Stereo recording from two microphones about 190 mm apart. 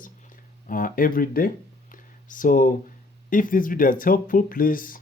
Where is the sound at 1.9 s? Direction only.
45° left (ahead or behind).